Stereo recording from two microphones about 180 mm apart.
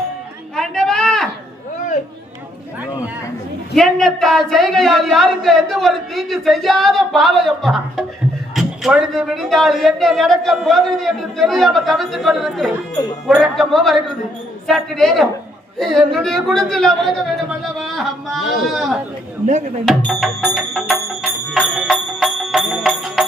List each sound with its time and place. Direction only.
0.5 s a sound: 5° left (ahead or behind)
3.8 s a man's voice: centre (ahead or behind)
17.5 s a sound: centre (ahead or behind)
18.7 s a man's voice: centre (ahead or behind)
19.5 s speech: 45° right (ahead or behind)
19.8 s music: centre (ahead or behind)